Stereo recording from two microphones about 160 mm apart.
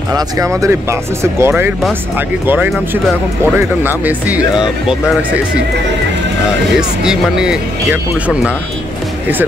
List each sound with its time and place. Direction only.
0.1 s speech: 20° right (ahead or behind)
7.1 s speech: 5° right (ahead or behind)